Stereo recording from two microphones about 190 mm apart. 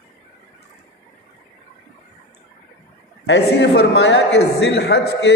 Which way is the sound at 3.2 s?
65° left (ahead or behind).